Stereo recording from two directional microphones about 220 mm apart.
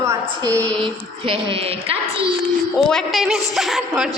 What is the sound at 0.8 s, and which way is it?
Speech, 25° right (ahead or behind).